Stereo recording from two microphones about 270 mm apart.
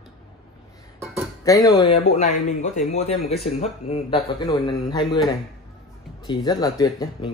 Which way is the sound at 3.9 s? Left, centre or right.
Centre.